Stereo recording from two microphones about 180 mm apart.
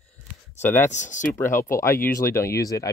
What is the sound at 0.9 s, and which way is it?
Speech, 45° left (ahead or behind).